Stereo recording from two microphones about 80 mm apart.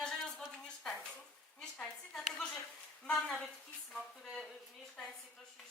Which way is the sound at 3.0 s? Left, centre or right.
Centre.